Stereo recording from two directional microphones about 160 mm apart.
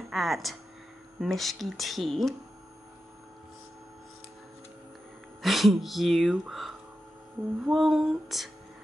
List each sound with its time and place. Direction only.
0.1 s speech: centre (ahead or behind)
5.4 s speech: centre (ahead or behind)